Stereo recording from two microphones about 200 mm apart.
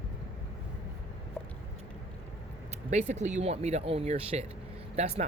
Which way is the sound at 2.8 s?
35° right (ahead or behind).